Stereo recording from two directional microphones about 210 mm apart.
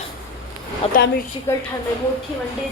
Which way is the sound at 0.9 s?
45° left (ahead or behind).